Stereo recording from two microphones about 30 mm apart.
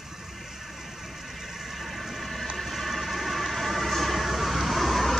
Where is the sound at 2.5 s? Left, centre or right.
Centre.